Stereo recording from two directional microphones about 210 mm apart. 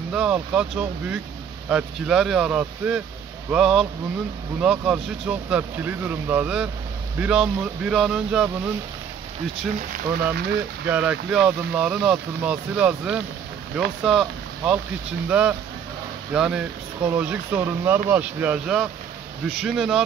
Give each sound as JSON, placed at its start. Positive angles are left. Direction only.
{"t": 0.1, "sound": "speech", "side_deg": -5}
{"t": 9.9, "sound": "speech", "side_deg": -50}
{"t": 10.9, "sound": "speech", "side_deg": -5}